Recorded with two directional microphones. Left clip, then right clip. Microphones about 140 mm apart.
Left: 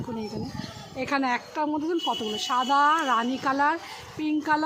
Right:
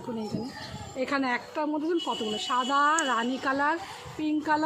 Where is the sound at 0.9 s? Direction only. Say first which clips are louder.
Left 2 dB; 35° left (ahead or behind).